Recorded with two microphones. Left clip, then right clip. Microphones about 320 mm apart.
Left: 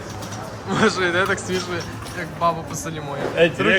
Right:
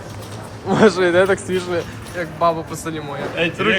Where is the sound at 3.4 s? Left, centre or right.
Left.